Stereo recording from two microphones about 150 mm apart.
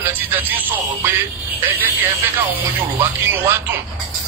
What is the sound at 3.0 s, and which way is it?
Speech, 15° right (ahead or behind).